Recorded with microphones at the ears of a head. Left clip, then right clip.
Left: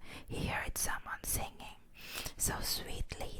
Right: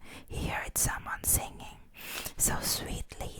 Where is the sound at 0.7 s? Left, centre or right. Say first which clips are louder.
Right 5 dB; right.